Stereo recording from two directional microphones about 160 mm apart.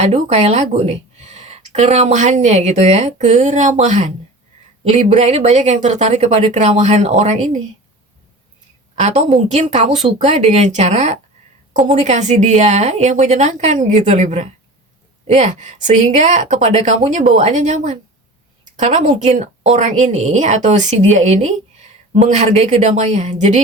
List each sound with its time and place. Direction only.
0.0 s a woman's voice: 45° right (ahead or behind)
9.0 s a woman's voice: 50° right (ahead or behind)